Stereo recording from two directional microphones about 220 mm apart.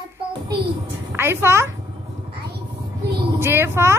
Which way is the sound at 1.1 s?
10° right (ahead or behind).